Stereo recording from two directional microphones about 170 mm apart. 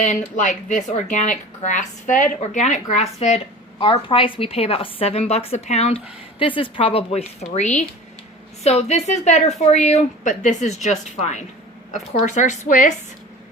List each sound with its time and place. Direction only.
0.3 s a woman's voice: 45° left (ahead or behind)